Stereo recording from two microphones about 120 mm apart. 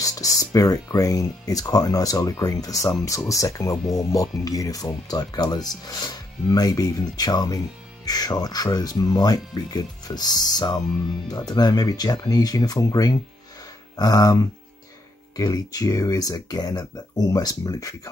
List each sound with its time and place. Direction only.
0.0 s speech: 30° left (ahead or behind)